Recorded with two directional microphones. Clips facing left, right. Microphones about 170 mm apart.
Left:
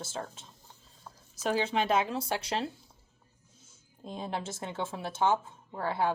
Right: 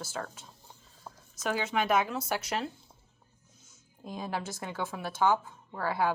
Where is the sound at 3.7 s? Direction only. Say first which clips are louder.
Even; 25° left (ahead or behind).